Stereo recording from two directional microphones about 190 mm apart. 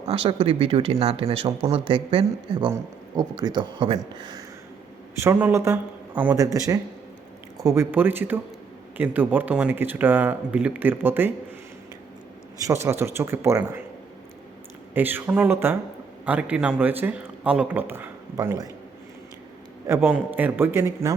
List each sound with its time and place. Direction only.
0.0 s speech: 30° right (ahead or behind); by 11.3 s 10° right (ahead or behind)
12.5 s speech: 15° right (ahead or behind)
14.9 s speech: 10° right (ahead or behind)
19.9 s speech: 10° right (ahead or behind)